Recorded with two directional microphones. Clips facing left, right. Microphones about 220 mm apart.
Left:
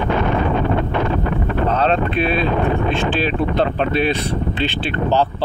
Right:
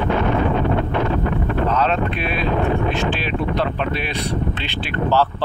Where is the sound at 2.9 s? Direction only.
30° left (ahead or behind).